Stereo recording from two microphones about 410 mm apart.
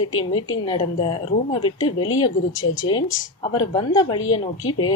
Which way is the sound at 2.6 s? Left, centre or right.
Left.